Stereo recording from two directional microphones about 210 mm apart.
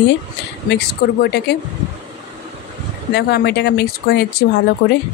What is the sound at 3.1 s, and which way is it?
Speech, 50° left (ahead or behind).